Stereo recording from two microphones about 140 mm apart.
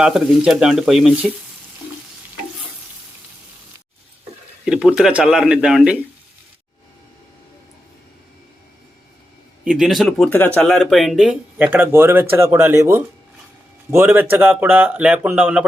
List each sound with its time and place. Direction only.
0.0 s speech: 5° right (ahead or behind)
4.6 s speech: 5° right (ahead or behind)
9.6 s speech: 5° right (ahead or behind)
10.3 s speech: 15° left (ahead or behind)
10.6 s speech: centre (ahead or behind)